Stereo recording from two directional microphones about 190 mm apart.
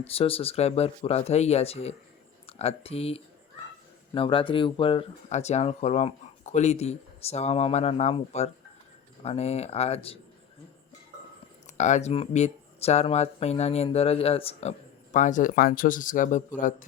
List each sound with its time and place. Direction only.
0.0 s speech: 30° left (ahead or behind)
11.8 s speech: 40° left (ahead or behind)